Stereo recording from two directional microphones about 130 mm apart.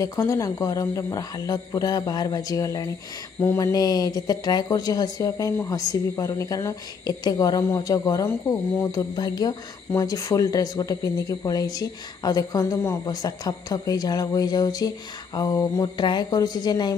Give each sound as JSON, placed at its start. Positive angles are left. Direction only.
{"t": 0.0, "sound": "speech", "side_deg": 25}